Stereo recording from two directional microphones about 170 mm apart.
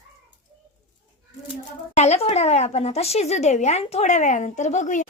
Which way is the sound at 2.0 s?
40° left (ahead or behind).